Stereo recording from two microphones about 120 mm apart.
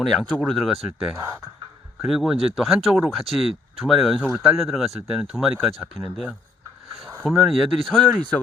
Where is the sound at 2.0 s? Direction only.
5° right (ahead or behind).